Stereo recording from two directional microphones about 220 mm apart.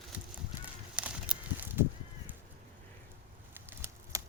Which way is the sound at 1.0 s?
5° right (ahead or behind).